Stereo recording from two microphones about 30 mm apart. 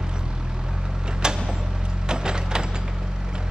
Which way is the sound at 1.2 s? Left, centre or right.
Right.